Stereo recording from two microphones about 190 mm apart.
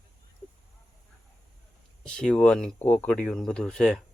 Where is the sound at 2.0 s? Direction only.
5° left (ahead or behind).